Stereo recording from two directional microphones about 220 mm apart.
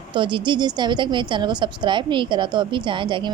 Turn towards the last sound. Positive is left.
turn(degrees=-20)  # may be behind; listen again after turning